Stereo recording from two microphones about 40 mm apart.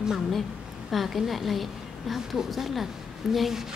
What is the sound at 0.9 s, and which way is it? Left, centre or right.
A woman's voice, centre.